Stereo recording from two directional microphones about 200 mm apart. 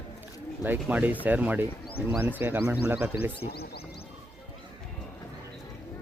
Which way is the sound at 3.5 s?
50° left (ahead or behind).